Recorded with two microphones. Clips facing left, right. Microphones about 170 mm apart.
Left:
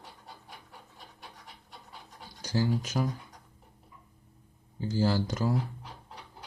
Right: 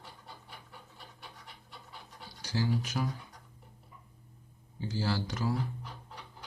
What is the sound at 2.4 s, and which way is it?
Speech, 40° left (ahead or behind).